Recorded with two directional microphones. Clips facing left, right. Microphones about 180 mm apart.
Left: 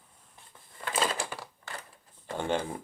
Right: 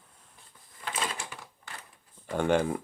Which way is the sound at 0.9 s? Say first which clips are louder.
Left 4 dB; 35° left (ahead or behind).